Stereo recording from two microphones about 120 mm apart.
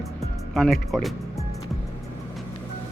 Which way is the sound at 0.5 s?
Centre (ahead or behind).